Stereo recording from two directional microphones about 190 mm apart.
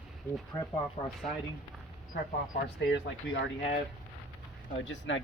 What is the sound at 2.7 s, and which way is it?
Speech, 70° left (ahead or behind).